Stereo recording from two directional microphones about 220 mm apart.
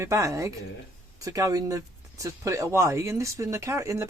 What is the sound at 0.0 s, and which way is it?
Speech, 15° right (ahead or behind).